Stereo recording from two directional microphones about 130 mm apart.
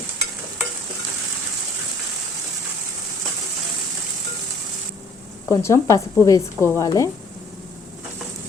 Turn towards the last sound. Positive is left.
turn(degrees=30)  # may be behind; listen again after turning